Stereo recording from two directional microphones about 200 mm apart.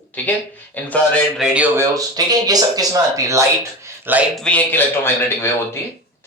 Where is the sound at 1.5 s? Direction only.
15° right (ahead or behind).